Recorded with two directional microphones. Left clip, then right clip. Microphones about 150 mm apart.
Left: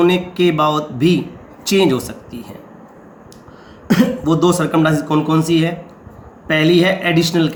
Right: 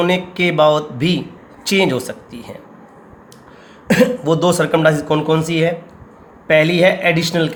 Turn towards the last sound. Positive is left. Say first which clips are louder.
# even
turn(degrees=-30)  # may be behind; listen again after turning